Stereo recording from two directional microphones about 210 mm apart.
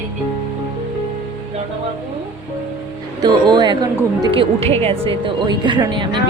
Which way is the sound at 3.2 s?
20° right (ahead or behind).